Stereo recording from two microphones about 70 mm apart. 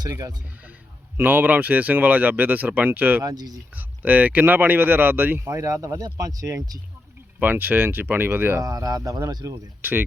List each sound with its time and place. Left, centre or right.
0.0 s speech: right
1.1 s speech: right
3.2 s speech: right
3.8 s speech: right
5.5 s speech: right
7.3 s speech: right
8.5 s speech: right
9.8 s speech: right